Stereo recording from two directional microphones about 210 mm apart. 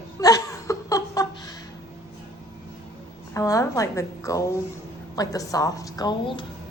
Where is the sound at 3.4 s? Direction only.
15° left (ahead or behind).